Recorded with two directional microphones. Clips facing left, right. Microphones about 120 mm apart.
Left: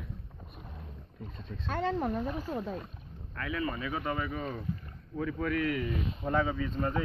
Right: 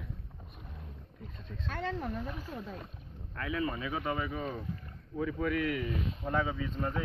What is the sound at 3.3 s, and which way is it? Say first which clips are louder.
A man's voice: even; 25° right (ahead or behind).